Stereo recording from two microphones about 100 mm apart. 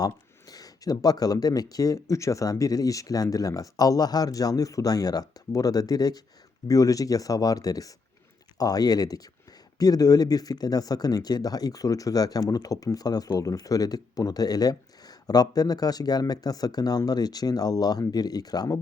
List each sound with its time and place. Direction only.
0.0 s speech: 40° left (ahead or behind)